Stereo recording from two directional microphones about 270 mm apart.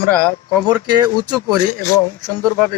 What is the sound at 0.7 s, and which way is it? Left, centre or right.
Speech, centre.